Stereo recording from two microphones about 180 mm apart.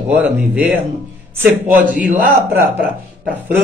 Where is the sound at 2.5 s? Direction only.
10° right (ahead or behind).